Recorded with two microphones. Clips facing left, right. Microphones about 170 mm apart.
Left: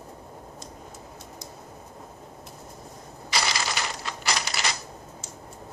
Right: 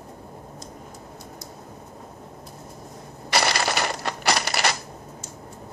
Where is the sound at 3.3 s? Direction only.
60° right (ahead or behind).